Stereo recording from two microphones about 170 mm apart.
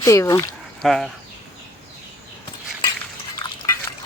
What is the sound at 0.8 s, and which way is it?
Speech, centre (ahead or behind).